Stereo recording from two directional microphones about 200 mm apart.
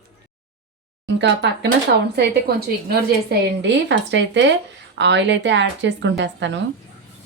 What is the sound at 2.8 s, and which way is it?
Speech, 60° right (ahead or behind).